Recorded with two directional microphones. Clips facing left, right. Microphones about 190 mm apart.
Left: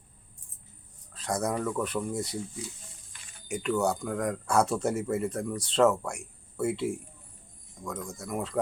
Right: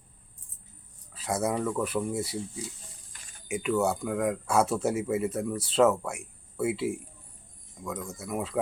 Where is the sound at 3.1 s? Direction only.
40° right (ahead or behind).